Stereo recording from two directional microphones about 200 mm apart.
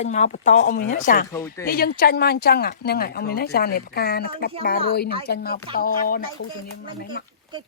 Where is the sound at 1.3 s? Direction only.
15° left (ahead or behind).